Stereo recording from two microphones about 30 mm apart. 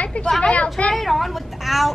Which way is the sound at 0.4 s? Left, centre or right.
Left.